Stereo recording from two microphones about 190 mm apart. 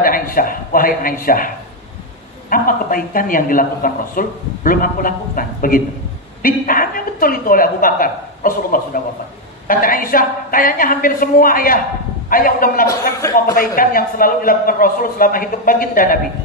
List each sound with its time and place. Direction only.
0.0 s speech: 50° left (ahead or behind)
2.5 s speech: 45° left (ahead or behind)
12.8 s a man's voice: 15° left (ahead or behind)
13.6 s speech: 50° left (ahead or behind)